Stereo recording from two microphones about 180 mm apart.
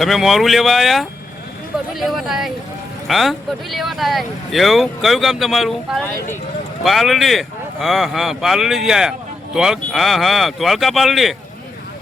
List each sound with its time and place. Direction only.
0.0 s speech: centre (ahead or behind)